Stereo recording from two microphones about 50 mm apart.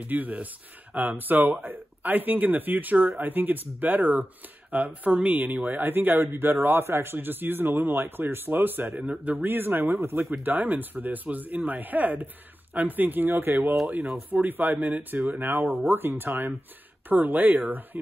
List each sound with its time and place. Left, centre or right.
0.0 s speech: right
10.4 s speech: right